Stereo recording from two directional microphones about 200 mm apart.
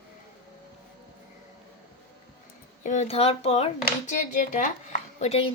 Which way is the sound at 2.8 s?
35° left (ahead or behind).